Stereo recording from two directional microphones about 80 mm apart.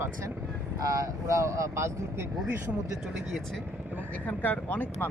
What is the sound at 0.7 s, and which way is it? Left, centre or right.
Speech, right.